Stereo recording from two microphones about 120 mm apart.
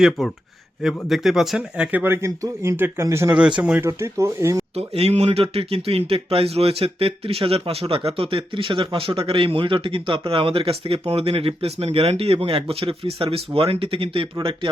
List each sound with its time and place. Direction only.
0.0 s speech: centre (ahead or behind); by 4.6 s 25° right (ahead or behind)
4.7 s speech: 60° right (ahead or behind)